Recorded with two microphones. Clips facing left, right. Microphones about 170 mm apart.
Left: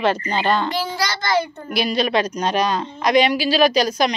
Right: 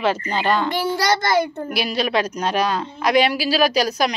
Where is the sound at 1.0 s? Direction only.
50° right (ahead or behind).